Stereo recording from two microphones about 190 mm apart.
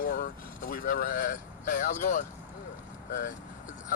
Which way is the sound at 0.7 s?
50° left (ahead or behind).